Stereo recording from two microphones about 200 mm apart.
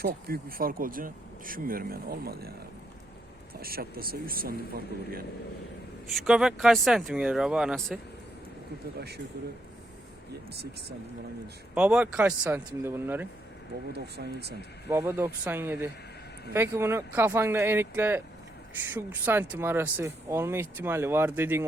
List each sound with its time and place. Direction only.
0.0 s speech: 50° right (ahead or behind)
3.5 s speech: 50° right (ahead or behind)
6.1 s speech: centre (ahead or behind)
9.0 s speech: 55° right (ahead or behind)
11.7 s speech: 5° right (ahead or behind)
13.9 s speech: 55° right (ahead or behind)
14.8 s speech: 10° right (ahead or behind)